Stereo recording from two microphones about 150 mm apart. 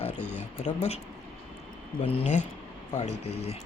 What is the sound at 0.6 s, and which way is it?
Speech, 45° left (ahead or behind).